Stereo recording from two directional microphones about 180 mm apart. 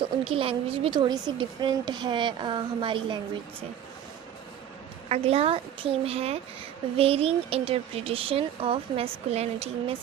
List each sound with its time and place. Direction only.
0.0 s a woman's voice: 30° right (ahead or behind)
5.0 s speech: 35° right (ahead or behind)